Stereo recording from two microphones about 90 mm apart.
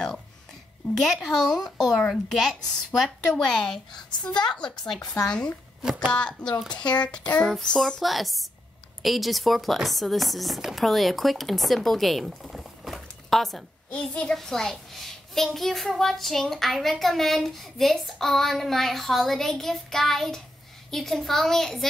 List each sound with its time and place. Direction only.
0.9 s a child's voice: centre (ahead or behind)
6.1 s child singing: 10° left (ahead or behind)
6.8 s speech: 55° left (ahead or behind)
7.1 s child singing: 10° left (ahead or behind)
7.5 s a child's voice: 5° left (ahead or behind)